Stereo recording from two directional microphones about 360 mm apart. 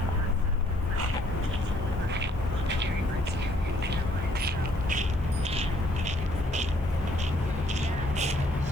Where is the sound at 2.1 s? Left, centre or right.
Right.